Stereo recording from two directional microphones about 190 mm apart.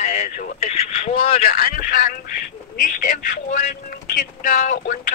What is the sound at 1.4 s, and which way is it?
Speech, 50° left (ahead or behind).